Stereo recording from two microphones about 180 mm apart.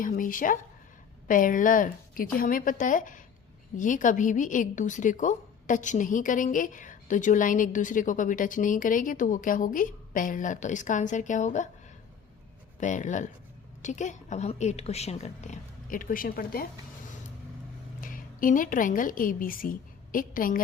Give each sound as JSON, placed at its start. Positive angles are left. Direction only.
{"t": 0.0, "sound": "a woman's voice", "side_deg": 50}
{"t": 12.8, "sound": "a woman's voice", "side_deg": 45}
{"t": 18.0, "sound": "a woman's voice", "side_deg": 50}